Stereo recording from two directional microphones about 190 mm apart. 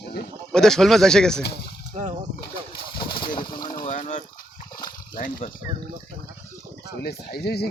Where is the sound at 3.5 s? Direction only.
45° left (ahead or behind).